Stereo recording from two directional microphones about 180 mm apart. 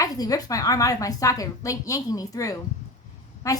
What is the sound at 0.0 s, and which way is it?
A woman's voice, 20° left (ahead or behind).